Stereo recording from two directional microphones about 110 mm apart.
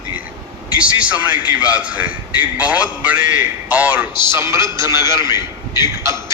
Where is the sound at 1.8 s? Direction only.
10° right (ahead or behind).